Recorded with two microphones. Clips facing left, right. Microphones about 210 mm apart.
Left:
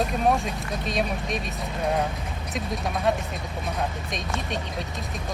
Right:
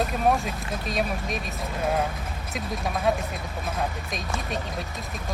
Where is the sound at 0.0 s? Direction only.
Centre (ahead or behind).